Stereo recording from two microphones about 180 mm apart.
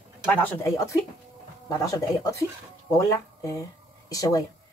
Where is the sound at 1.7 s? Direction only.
20° left (ahead or behind).